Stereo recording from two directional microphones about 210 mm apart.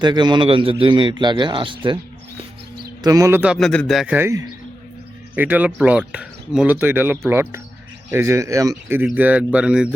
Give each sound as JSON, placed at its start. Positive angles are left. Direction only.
{"t": 0.0, "sound": "a man's voice", "side_deg": -20}
{"t": 3.0, "sound": "speech", "side_deg": -15}